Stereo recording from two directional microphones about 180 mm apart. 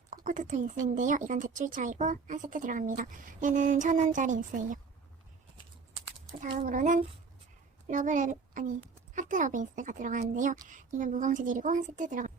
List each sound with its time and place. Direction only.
0.1 s a woman's voice: 45° right (ahead or behind)
6.6 s a woman's voice: 45° right (ahead or behind)